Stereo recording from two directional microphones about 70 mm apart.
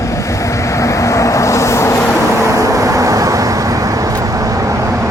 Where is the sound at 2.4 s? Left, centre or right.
Right.